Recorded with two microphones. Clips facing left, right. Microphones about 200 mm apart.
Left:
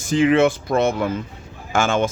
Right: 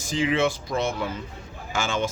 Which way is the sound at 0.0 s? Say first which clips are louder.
Left 8 dB; 55° left (ahead or behind).